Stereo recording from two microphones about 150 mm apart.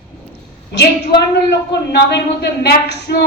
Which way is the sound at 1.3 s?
90° left.